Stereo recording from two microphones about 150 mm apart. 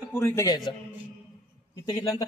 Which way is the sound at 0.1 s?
15° left (ahead or behind).